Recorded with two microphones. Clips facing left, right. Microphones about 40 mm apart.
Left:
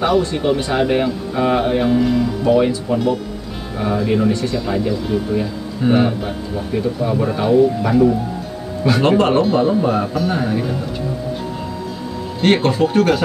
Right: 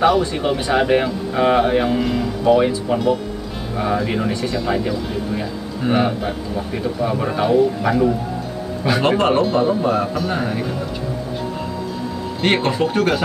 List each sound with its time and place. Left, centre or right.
0.0 s a man's voice: centre
2.9 s speech: right
3.7 s a man's voice: centre
12.4 s speech: centre